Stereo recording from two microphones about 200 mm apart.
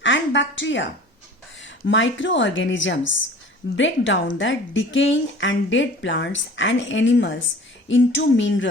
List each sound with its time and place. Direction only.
0.0 s a woman's voice: 65° left (ahead or behind)